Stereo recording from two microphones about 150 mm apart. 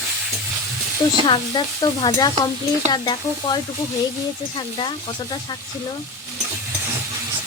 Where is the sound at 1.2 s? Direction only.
30° left (ahead or behind).